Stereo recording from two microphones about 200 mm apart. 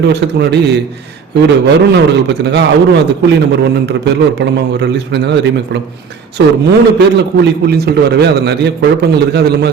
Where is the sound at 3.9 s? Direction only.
55° right (ahead or behind).